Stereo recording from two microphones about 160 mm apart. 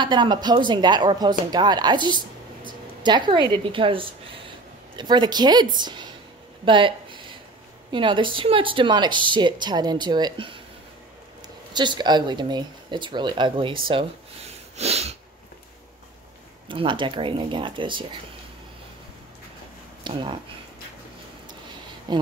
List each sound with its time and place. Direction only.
0.0 s speech: 30° right (ahead or behind)
6.6 s a sound: 30° right (ahead or behind)
7.9 s speech: 30° right (ahead or behind)
11.7 s speech: 30° right (ahead or behind)
13.8 s sniff: 35° right (ahead or behind)
16.6 s speech: 30° right (ahead or behind)
20.0 s speech: 30° right (ahead or behind)
22.1 s speech: 25° right (ahead or behind)